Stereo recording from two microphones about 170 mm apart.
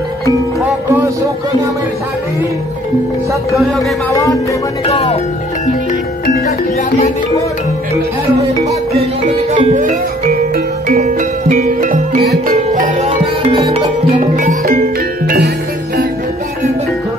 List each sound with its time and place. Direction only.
4.1 s music: 20° left (ahead or behind)
4.8 s speech: 35° left (ahead or behind)
8.6 s music: 45° right (ahead or behind)
13.2 s music: 30° right (ahead or behind)
14.2 s music: 50° right (ahead or behind); by 15.5 s 65° right (ahead or behind)